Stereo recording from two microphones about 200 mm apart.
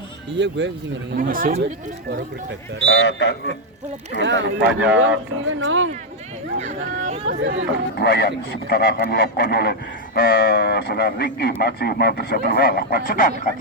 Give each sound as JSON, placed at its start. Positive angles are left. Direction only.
{"t": 0.3, "sound": "speech", "side_deg": -60}
{"t": 1.1, "sound": "speech", "side_deg": -45}
{"t": 2.0, "sound": "speech", "side_deg": -60}
{"t": 2.8, "sound": "speech", "side_deg": 70}
{"t": 4.2, "sound": "speech", "side_deg": -65}
{"t": 4.9, "sound": "speech", "side_deg": -75}
{"t": 6.6, "sound": "speech", "side_deg": -35}
{"t": 7.3, "sound": "speech", "side_deg": -65}
{"t": 7.9, "sound": "speech", "side_deg": 55}